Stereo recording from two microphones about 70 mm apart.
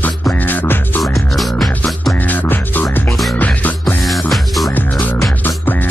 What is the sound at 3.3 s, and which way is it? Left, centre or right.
Music, left.